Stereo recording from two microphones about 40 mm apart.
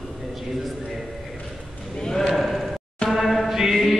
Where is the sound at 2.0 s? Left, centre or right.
Centre.